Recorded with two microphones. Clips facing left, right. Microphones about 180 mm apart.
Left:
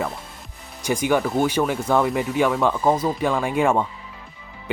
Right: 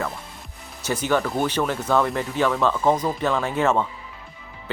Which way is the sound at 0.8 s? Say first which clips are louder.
Left 2 dB; 10° left (ahead or behind).